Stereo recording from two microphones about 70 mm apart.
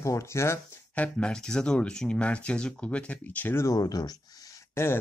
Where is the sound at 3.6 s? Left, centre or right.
Left.